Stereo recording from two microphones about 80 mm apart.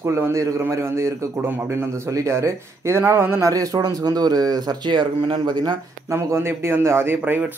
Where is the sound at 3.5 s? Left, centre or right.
Right.